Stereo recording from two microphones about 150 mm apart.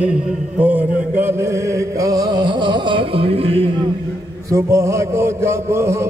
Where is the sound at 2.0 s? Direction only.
25° right (ahead or behind).